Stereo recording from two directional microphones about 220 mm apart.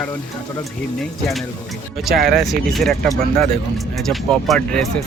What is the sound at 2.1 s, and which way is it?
Speech, 45° right (ahead or behind).